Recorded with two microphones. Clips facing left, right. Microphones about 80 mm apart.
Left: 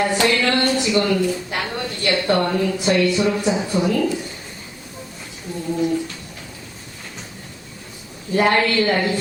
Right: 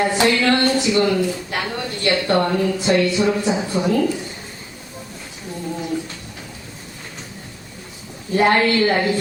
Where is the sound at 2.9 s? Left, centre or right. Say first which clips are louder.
Right 1 dB; centre.